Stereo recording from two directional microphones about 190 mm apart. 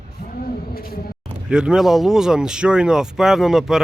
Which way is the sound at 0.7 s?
50° left (ahead or behind).